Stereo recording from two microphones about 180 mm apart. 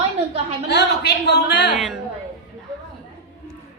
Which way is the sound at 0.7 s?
70° left (ahead or behind).